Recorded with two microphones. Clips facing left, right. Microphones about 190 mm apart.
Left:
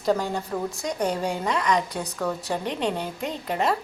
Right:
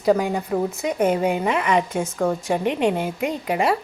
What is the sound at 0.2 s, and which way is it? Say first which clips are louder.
A woman's voice: right 5 dB; 15° right (ahead or behind).